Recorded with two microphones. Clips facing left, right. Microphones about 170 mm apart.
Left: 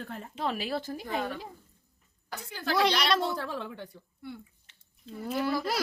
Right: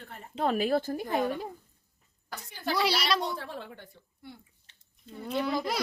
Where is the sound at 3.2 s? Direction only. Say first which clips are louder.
Left 3 dB; 90° left.